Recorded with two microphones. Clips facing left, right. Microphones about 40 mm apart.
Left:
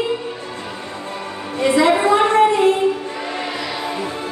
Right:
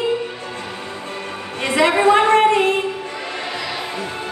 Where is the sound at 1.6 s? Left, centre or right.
Right.